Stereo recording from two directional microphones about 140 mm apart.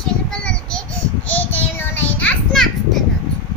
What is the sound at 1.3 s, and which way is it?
Child singing, 10° left (ahead or behind).